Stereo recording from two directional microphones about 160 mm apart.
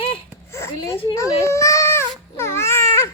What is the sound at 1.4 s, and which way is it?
Baby cry, 20° left (ahead or behind).